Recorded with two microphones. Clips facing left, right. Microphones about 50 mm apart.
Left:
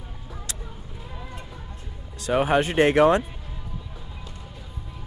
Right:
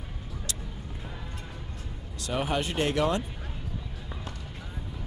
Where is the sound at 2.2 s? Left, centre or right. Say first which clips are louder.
Left 8 dB; left.